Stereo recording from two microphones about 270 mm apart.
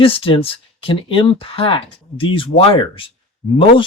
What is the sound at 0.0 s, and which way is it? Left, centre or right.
Speech, centre.